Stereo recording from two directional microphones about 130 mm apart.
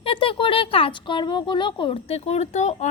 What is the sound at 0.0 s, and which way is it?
Speech, 45° left (ahead or behind).